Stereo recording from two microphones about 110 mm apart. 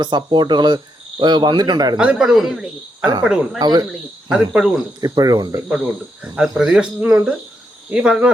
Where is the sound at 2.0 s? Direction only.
5° right (ahead or behind).